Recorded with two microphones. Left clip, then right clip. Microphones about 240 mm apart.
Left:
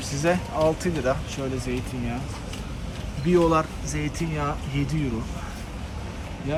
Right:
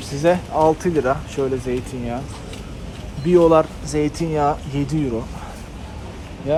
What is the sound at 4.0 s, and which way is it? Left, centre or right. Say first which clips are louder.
Speech: right 11 dB; centre.